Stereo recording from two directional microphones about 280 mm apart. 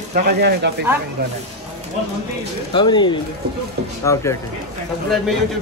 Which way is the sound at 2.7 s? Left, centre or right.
Centre.